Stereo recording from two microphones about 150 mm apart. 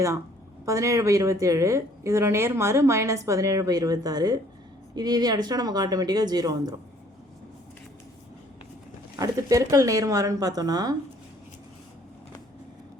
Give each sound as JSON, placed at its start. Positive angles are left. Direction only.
{"t": 0.6, "sound": "speech", "side_deg": -20}
{"t": 9.1, "sound": "speech", "side_deg": -20}